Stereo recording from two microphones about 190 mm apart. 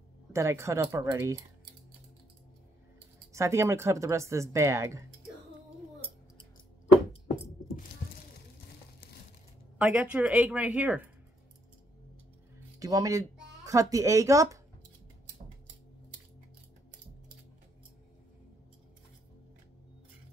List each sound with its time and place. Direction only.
0.3 s speech: 15° right (ahead or behind)
3.3 s speech: 15° right (ahead or behind)
9.8 s speech: 5° right (ahead or behind)
12.7 s speech: 20° right (ahead or behind)